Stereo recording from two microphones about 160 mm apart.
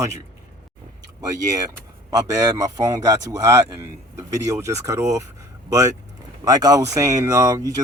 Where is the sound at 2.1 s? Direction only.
25° right (ahead or behind).